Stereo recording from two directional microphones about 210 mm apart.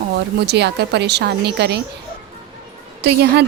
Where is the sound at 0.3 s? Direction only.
50° right (ahead or behind).